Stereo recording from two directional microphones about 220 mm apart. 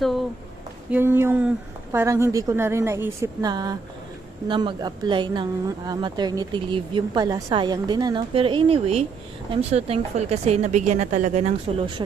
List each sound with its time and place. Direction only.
0.9 s a woman's voice: 10° right (ahead or behind); by 12.0 s 30° right (ahead or behind)